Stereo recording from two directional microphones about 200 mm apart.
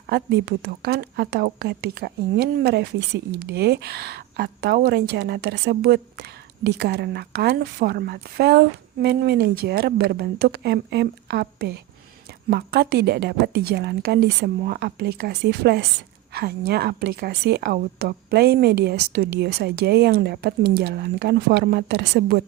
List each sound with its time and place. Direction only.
0.1 s a woman's voice: 55° right (ahead or behind)